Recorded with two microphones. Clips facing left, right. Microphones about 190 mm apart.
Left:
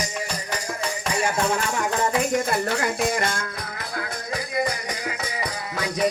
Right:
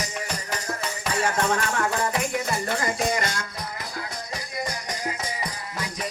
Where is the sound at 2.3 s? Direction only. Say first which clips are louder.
Left 4 dB; 55° left (ahead or behind).